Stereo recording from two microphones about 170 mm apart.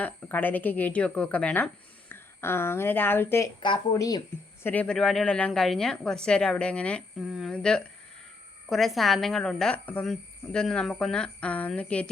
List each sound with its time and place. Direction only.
0.0 s speech: 10° left (ahead or behind)
4.6 s speech: 10° left (ahead or behind)